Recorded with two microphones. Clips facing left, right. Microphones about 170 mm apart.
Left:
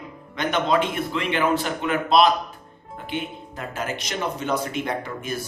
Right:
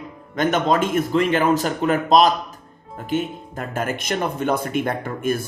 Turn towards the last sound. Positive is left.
turn(degrees=-50)  # may be behind; listen again after turning